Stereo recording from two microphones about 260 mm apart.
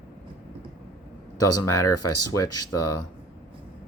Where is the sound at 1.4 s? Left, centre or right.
Left.